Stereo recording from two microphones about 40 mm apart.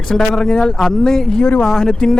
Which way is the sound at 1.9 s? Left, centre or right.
Centre.